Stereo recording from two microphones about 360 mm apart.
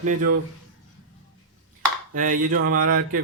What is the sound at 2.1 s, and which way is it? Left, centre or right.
Speech, right.